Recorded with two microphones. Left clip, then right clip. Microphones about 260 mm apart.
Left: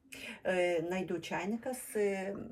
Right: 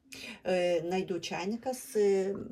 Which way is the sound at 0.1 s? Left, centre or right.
Centre.